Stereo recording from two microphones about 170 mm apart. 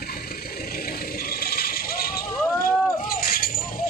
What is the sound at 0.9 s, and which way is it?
Vehicle, 60° left (ahead or behind).